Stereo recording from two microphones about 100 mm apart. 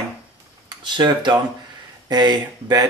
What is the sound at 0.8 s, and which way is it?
Speech, 50° right (ahead or behind).